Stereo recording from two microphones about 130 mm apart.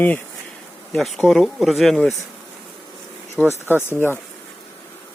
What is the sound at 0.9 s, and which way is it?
Speech, centre (ahead or behind).